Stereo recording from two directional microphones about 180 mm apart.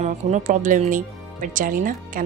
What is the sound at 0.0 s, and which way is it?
Speech, 40° right (ahead or behind).